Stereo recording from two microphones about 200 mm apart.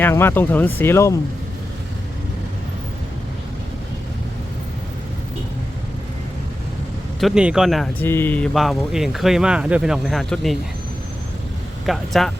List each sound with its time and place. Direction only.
0.0 s speech: 10° left (ahead or behind)
7.2 s speech: centre (ahead or behind)
8.0 s speech: 10° left (ahead or behind)
11.9 s speech: centre (ahead or behind)